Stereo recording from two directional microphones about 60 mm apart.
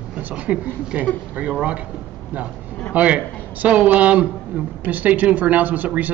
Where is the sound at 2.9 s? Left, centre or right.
Right.